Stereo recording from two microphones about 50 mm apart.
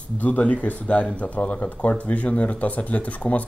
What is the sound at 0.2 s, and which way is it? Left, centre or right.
Speech, left.